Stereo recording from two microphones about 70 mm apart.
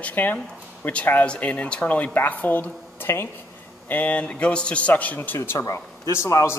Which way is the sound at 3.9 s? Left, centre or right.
Left.